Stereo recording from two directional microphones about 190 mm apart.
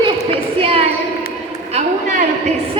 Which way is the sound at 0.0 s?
30° right (ahead or behind).